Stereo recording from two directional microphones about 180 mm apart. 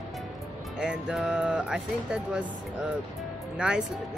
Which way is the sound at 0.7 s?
5° right (ahead or behind).